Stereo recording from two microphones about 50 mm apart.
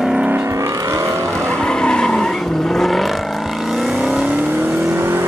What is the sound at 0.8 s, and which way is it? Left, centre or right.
Vehicle, right.